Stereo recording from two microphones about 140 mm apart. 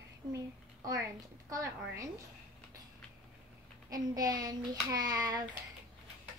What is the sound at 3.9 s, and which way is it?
A child's voice, 25° right (ahead or behind).